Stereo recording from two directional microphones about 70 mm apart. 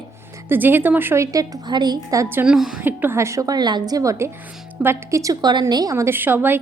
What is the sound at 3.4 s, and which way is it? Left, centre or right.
Speech, right.